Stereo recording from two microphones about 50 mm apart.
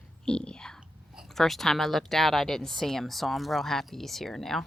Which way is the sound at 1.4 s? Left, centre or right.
Centre.